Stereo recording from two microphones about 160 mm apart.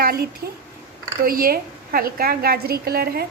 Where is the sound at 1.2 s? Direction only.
65° right (ahead or behind).